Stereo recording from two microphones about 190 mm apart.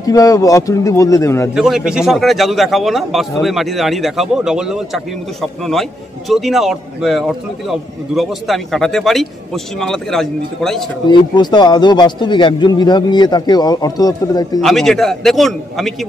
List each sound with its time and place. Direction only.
0.0 s speech: 20° left (ahead or behind)
1.5 s a man's voice: 5° right (ahead or behind)
11.1 s a man's voice: 25° left (ahead or behind)
14.6 s a man's voice: centre (ahead or behind)